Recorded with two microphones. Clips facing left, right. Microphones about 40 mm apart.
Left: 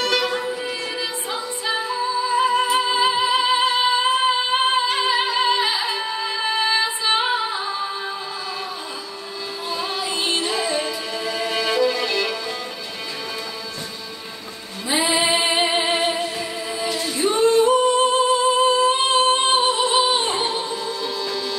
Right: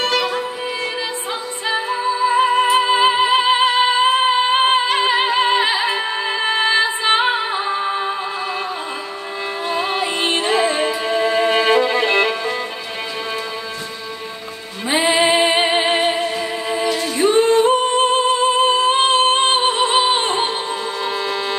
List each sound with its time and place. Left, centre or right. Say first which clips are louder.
0.1 s music: right 2 dB; centre
1.7 s music: right 4 dB; right
9.7 s music: right 5 dB; right
14.9 s music: right 4 dB; right